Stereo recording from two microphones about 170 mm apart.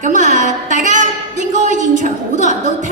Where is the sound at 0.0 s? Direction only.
45° right (ahead or behind).